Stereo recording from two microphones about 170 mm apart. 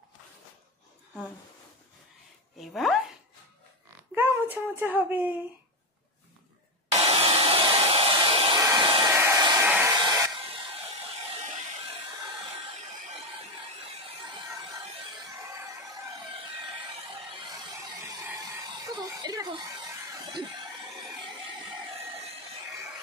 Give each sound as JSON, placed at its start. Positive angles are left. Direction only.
{"t": 2.6, "sound": "speech", "side_deg": 0}
{"t": 4.1, "sound": "a sound", "side_deg": -10}
{"t": 6.9, "sound": "hair dryer", "side_deg": -35}
{"t": 8.5, "sound": "hair dryer", "side_deg": -20}
{"t": 8.8, "sound": "hair dryer", "side_deg": -30}
{"t": 9.1, "sound": "hair dryer", "side_deg": -15}
{"t": 18.9, "sound": "chuckle", "side_deg": -25}